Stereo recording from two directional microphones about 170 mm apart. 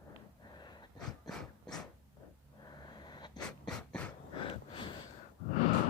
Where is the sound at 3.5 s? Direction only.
5° left (ahead or behind).